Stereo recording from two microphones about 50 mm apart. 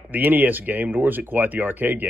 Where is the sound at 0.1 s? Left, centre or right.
Right.